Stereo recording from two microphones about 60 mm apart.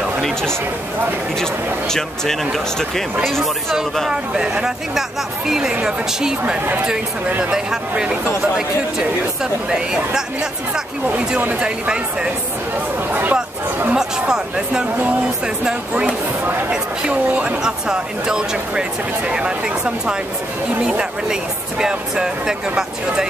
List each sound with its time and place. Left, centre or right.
0.2 s a sound: centre
1.4 s speech: centre
4.1 s speech: centre
9.4 s speech: centre
11.1 s speech: right
11.6 s speech: centre
13.1 s chatter: right
13.9 s speech: centre
15.9 s a sound: right
16.7 s speech: centre